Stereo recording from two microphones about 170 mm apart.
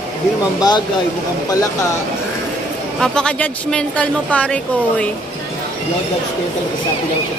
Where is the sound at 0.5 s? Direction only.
25° left (ahead or behind).